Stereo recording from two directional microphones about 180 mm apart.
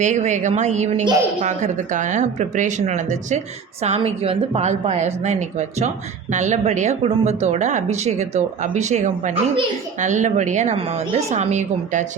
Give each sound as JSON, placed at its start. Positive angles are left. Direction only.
{"t": 0.0, "sound": "speech", "side_deg": -40}